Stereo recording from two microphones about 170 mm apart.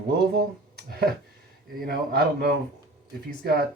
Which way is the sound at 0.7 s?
70° right (ahead or behind).